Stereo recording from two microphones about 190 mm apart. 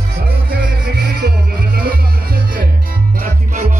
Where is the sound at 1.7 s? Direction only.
50° right (ahead or behind).